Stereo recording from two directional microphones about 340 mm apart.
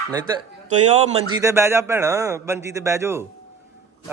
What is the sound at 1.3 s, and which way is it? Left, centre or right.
Speech, centre.